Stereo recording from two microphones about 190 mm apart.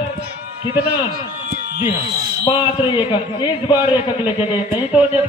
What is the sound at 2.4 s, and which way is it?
A man's voice, 25° left (ahead or behind).